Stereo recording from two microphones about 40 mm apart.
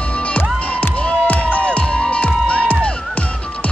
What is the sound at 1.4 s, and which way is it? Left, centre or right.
Music, left.